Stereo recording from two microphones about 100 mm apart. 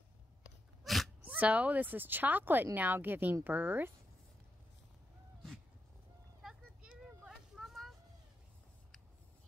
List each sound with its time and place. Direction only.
0.8 s dog: centre (ahead or behind)
1.2 s speech: 15° right (ahead or behind)
6.4 s a sound: 10° right (ahead or behind)